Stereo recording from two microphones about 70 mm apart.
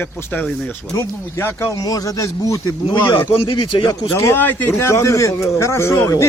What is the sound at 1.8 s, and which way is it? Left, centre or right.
Speech, left.